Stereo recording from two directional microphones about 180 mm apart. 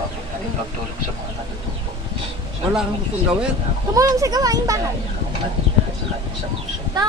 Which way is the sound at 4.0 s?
20° right (ahead or behind).